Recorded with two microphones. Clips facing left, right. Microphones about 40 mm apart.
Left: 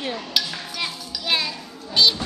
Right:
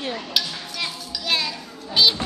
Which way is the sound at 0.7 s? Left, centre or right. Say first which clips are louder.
Even; centre.